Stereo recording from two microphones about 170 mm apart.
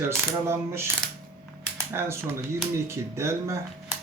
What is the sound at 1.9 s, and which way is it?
Speech, 15° right (ahead or behind).